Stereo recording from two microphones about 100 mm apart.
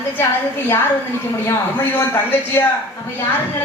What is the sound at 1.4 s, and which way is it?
A man's voice, 20° left (ahead or behind).